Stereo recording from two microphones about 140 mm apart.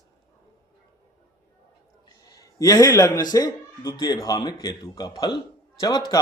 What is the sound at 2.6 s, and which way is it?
Speech, 25° left (ahead or behind).